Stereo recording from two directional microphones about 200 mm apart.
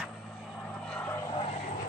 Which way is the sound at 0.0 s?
Centre (ahead or behind).